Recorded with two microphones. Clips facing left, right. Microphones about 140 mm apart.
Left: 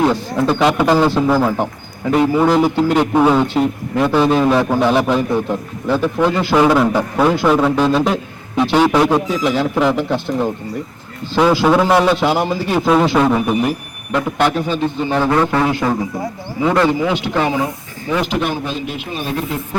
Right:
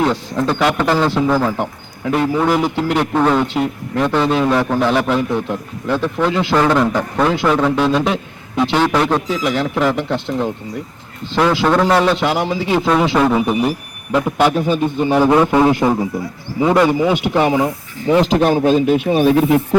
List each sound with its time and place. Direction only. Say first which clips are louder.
0.0 s a man's voice: left 2 dB; 5° left (ahead or behind)
3.0 s a man's voice: left 1 dB; 10° left (ahead or behind); by 17.7 s 15° right (ahead or behind)
18.1 s speech: right 6 dB; 35° right (ahead or behind)
18.5 s speech: right 10 dB; 50° right (ahead or behind); by 19.6 s 65° right (ahead or behind)